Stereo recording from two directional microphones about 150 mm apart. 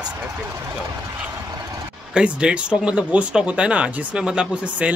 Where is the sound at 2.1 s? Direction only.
5° right (ahead or behind).